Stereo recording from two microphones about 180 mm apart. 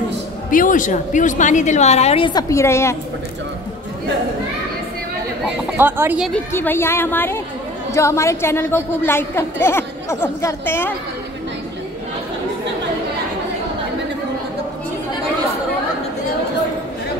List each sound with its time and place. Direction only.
0.5 s a woman's voice: 45° left (ahead or behind); by 3.0 s 15° left (ahead or behind)
5.8 s speech: 10° right (ahead or behind)
6.5 s a woman's voice: 10° left (ahead or behind)